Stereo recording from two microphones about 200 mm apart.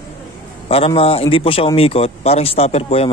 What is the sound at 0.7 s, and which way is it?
A man's voice, 30° left (ahead or behind).